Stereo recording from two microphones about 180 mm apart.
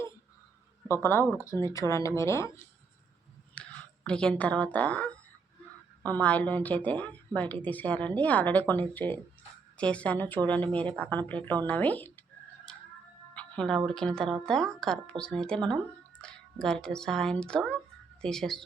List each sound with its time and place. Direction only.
1.0 s a woman's voice: 15° left (ahead or behind)
3.5 s a woman's voice: 5° left (ahead or behind)
13.3 s speech: 5° left (ahead or behind)